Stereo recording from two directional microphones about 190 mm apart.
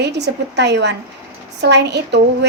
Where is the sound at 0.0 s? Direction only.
65° right (ahead or behind).